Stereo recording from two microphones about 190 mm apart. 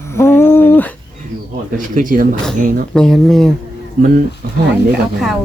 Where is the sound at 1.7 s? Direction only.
45° right (ahead or behind).